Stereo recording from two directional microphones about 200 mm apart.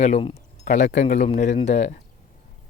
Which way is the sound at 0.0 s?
30° left (ahead or behind).